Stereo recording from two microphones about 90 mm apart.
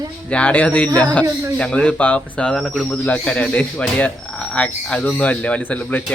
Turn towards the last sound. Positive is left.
turn(degrees=15)  # may be behind; listen again after turning